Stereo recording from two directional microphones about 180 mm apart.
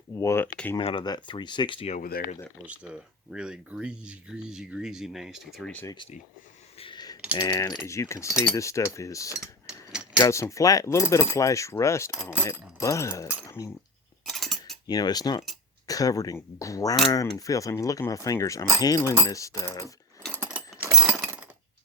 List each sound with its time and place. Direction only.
0.2 s a sound: 15° left (ahead or behind)
0.8 s speech: 30° left (ahead or behind)
2.0 s speech: 55° left (ahead or behind)
2.6 s speech: 5° right (ahead or behind)
5.8 s speech: 20° left (ahead or behind)
6.7 s a sound: 25° left (ahead or behind)
7.3 s keys jangling: 20° left (ahead or behind)
12.1 s mechanisms: 10° right (ahead or behind)
12.8 s keys jangling: 15° left (ahead or behind)
14.3 s a sound: centre (ahead or behind)
14.8 s speech: 20° left (ahead or behind)
19.3 s keys jangling: 20° left (ahead or behind)
20.2 s sewing machine: 5° right (ahead or behind)
21.2 s a sound: 10° right (ahead or behind)